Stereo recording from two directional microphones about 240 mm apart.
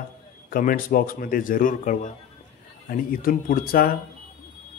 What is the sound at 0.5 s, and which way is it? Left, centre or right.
A man's voice, left.